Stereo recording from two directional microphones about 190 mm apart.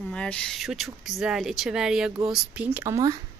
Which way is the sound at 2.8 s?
15° right (ahead or behind).